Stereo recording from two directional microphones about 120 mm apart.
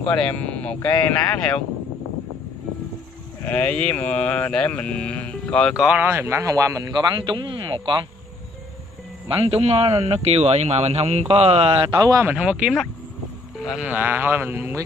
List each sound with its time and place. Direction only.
0.0 s mantra: 10° left (ahead or behind)
3.4 s mantra: 10° left (ahead or behind)
5.8 s speech: 10° right (ahead or behind)
6.0 s speech: 20° right (ahead or behind)
7.2 s speech: 40° right (ahead or behind)
9.3 s speech: 50° right (ahead or behind)
11.9 s speech: 30° right (ahead or behind)
12.3 s speech: 5° right (ahead or behind)